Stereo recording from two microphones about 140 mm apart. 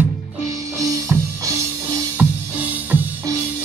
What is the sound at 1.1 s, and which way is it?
Music, 20° right (ahead or behind).